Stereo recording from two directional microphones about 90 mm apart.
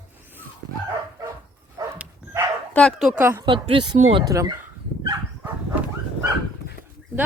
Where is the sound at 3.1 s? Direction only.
25° right (ahead or behind).